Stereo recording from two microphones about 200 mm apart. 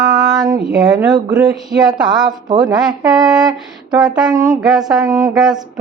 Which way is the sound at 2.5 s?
20° right (ahead or behind).